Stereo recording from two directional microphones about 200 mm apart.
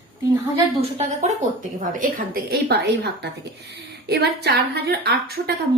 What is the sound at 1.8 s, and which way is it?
A woman's voice, 40° right (ahead or behind).